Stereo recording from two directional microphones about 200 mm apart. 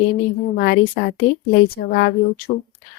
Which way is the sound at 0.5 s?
55° left (ahead or behind).